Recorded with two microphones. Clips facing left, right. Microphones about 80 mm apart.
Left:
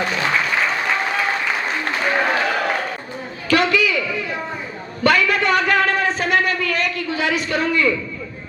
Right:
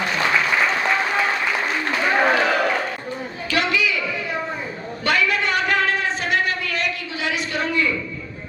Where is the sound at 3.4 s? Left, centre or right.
Left.